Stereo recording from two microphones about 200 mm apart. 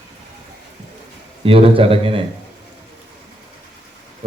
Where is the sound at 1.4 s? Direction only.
30° right (ahead or behind).